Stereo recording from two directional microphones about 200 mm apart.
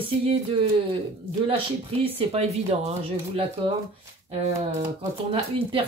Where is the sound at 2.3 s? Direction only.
30° right (ahead or behind).